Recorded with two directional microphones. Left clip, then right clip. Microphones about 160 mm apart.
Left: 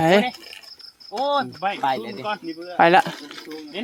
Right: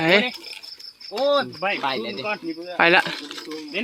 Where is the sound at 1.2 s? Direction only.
60° right (ahead or behind).